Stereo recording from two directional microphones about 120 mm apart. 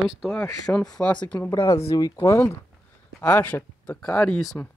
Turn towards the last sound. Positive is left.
turn(degrees=10)  # may be behind; listen again after turning